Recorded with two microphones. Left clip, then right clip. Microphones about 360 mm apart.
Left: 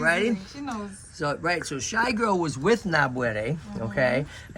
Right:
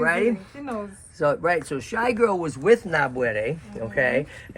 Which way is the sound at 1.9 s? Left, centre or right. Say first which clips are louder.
Right 3 dB; centre.